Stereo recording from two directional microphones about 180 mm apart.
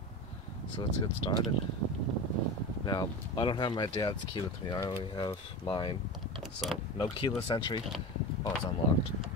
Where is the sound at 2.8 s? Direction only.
25° left (ahead or behind).